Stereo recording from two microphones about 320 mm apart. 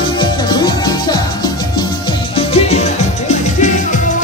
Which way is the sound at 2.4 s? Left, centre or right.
Centre.